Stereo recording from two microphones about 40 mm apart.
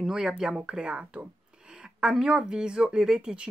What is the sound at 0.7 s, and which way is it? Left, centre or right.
Speech, right.